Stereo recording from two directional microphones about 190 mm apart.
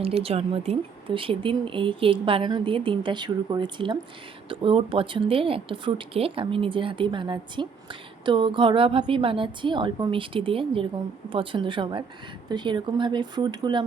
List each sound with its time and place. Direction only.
0.0 s speech: 30° right (ahead or behind)